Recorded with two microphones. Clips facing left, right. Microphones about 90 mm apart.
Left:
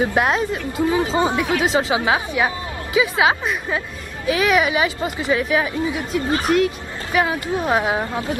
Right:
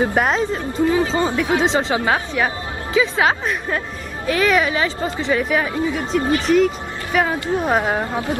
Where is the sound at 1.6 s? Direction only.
5° left (ahead or behind).